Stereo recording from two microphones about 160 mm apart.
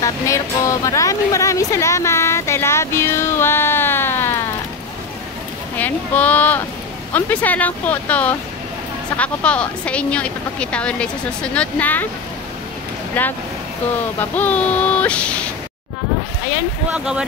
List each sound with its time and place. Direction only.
0.0 s speech: 20° left (ahead or behind)
5.8 s speech: 10° left (ahead or behind)
13.2 s speech: 10° left (ahead or behind)
16.9 s speech: 5° right (ahead or behind)